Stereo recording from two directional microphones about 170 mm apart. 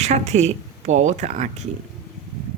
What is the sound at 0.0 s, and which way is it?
Speech, 40° right (ahead or behind).